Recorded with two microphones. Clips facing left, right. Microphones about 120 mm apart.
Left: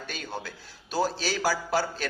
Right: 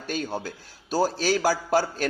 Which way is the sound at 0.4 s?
40° right (ahead or behind).